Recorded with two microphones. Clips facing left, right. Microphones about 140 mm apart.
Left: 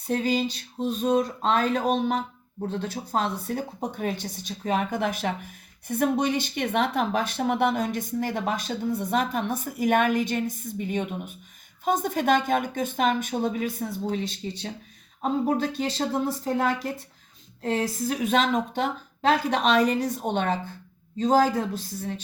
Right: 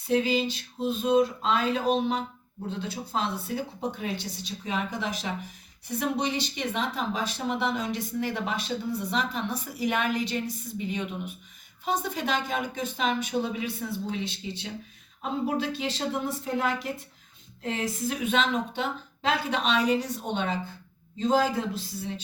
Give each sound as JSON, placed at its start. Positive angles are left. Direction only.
{"t": 0.1, "sound": "speech", "side_deg": 45}